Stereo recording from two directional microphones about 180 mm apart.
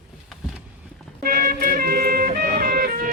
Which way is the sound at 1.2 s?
55° right (ahead or behind).